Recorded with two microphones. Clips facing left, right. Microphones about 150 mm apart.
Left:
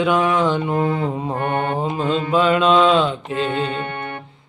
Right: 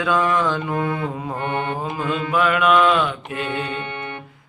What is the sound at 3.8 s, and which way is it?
Music, 50° left (ahead or behind).